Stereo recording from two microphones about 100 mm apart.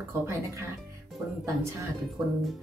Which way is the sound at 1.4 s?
30° right (ahead or behind).